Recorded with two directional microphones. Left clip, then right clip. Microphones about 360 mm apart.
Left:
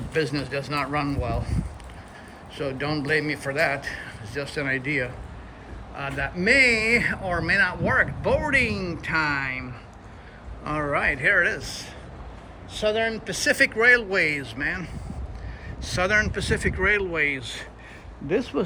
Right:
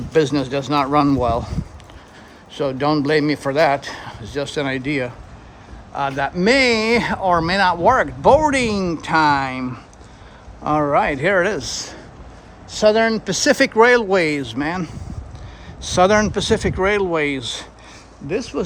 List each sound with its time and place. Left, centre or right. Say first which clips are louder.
0.1 s speech: right 9 dB; centre
2.6 s speech: right 9 dB; centre
6.3 s speech: right 2 dB; centre